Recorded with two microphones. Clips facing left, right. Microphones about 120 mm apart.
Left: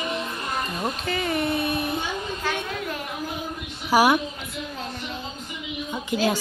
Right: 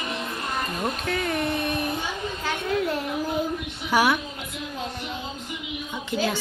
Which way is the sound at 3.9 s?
35° left (ahead or behind).